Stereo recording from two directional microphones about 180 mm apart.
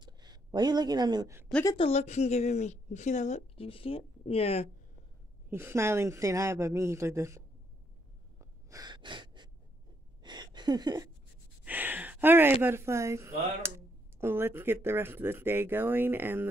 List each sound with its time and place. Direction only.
0.0 s speech: 25° right (ahead or behind)
1.8 s a woman's voice: 35° left (ahead or behind)
5.5 s speech: 15° right (ahead or behind)
8.4 s gasp: 20° right (ahead or behind)
10.2 s a sound: 25° right (ahead or behind)
11.6 s a sound: 10° right (ahead or behind)
12.6 s speech: 15° right (ahead or behind)